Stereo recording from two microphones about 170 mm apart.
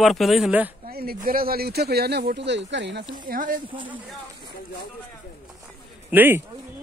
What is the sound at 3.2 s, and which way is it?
Speech, 55° right (ahead or behind).